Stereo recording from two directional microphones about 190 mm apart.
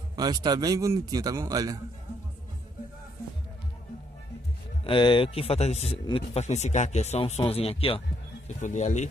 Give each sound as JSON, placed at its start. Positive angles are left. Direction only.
{"t": 0.1, "sound": "a man's voice", "side_deg": -20}
{"t": 4.8, "sound": "speech", "side_deg": 25}